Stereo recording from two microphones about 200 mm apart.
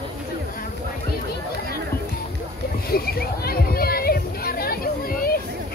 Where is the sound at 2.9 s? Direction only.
50° left (ahead or behind).